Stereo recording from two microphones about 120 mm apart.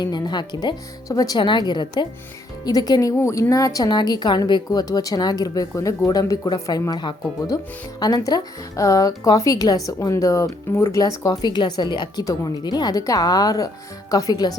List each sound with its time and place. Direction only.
0.0 s a woman's voice: 35° left (ahead or behind)
11.4 s a woman's voice: 40° left (ahead or behind)